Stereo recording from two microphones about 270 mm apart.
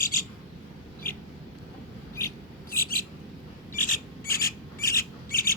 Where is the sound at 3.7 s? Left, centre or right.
Left.